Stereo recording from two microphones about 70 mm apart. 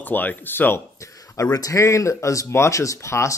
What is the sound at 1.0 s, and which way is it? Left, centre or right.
Speech, left.